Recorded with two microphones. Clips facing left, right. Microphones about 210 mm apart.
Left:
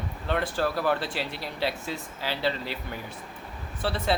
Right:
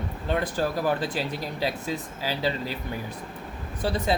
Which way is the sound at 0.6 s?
15° right (ahead or behind).